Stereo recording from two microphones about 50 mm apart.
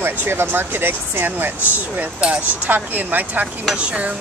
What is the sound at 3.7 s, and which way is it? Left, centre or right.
Stir, right.